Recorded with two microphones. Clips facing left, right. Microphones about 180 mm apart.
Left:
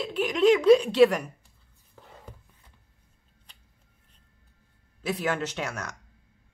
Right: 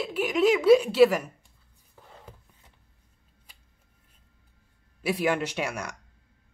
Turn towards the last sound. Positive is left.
turn(degrees=-10)  # may be behind; listen again after turning